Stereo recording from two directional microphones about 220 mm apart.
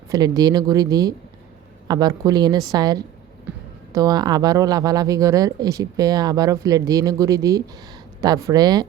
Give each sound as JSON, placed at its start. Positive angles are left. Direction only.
{"t": 0.1, "sound": "speech", "side_deg": -15}